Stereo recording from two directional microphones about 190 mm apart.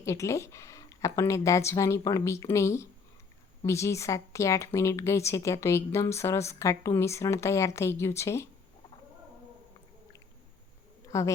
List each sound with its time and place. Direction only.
0.0 s speech: 15° left (ahead or behind)
11.1 s speech: 15° left (ahead or behind)